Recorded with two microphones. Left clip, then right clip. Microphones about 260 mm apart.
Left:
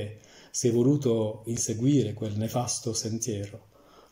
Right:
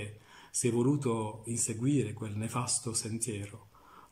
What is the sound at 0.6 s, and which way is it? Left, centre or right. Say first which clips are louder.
Speech: left 6 dB; centre.